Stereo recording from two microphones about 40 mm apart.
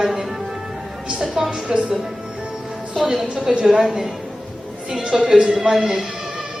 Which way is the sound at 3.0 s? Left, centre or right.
Centre.